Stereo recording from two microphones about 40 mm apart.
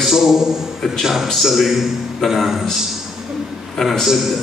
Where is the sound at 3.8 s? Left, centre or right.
Centre.